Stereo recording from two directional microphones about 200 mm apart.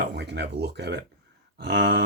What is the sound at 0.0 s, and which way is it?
Speech, 60° right (ahead or behind).